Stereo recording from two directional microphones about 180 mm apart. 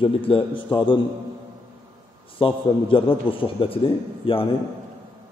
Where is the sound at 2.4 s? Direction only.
30° left (ahead or behind).